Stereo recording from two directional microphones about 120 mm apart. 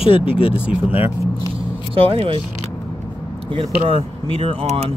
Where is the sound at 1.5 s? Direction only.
50° right (ahead or behind).